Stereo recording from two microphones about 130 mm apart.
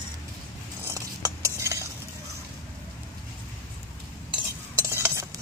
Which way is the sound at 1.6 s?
20° right (ahead or behind).